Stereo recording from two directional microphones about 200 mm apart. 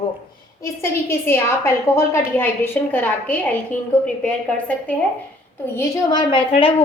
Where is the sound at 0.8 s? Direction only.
10° left (ahead or behind).